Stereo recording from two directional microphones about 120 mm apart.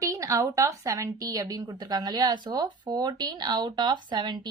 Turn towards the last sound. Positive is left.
turn(degrees=-40)  # may be behind; listen again after turning